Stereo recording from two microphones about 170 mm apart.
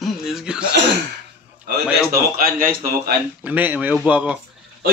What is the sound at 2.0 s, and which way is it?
A man's voice, 60° right (ahead or behind).